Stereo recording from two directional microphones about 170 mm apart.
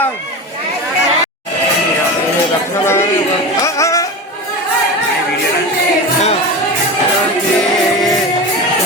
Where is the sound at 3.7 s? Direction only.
20° left (ahead or behind).